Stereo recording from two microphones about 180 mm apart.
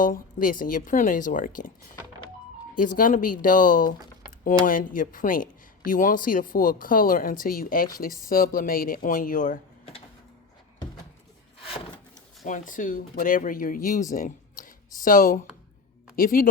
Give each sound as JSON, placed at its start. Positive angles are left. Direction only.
{"t": 0.0, "sound": "speech", "side_deg": 50}
{"t": 12.5, "sound": "speech", "side_deg": 45}